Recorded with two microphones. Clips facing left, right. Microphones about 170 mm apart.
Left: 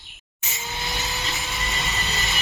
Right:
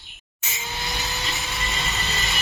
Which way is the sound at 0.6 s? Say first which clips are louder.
Even; centre (ahead or behind).